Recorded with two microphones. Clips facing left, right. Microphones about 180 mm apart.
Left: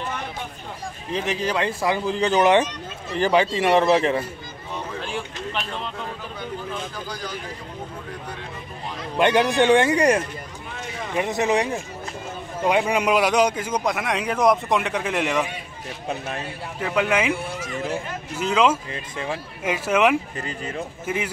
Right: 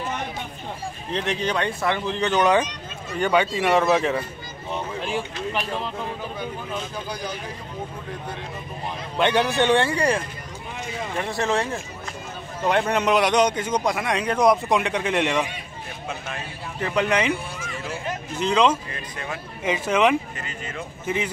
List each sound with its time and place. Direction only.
1.1 s speech: 5° left (ahead or behind)
2.1 s speech: 30° left (ahead or behind)
3.9 s speech: centre (ahead or behind)
9.5 s speech: 15° left (ahead or behind)
11.1 s speech: 20° left (ahead or behind); by 15.4 s centre (ahead or behind)
16.8 s speech: 5° left (ahead or behind)
17.6 s a sound: 40° left (ahead or behind)
18.3 s speech: 5° left (ahead or behind)
18.9 s speech: 25° left (ahead or behind)
19.6 s speech: 5° left (ahead or behind)
20.3 s speech: 35° left (ahead or behind)